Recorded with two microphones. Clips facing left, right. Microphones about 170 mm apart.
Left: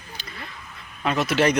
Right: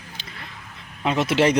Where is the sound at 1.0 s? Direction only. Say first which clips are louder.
Right 2 dB; 25° right (ahead or behind).